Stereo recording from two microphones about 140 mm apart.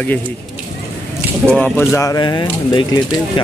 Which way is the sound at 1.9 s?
25° left (ahead or behind).